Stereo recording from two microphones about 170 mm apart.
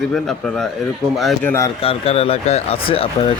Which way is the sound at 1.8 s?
35° left (ahead or behind).